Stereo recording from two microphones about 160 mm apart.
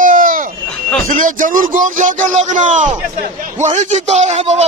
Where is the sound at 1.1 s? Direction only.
55° right (ahead or behind).